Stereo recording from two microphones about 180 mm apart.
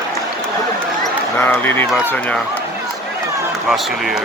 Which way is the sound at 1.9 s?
5° right (ahead or behind).